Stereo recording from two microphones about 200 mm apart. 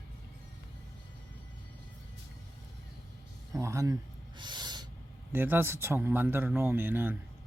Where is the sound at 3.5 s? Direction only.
15° right (ahead or behind).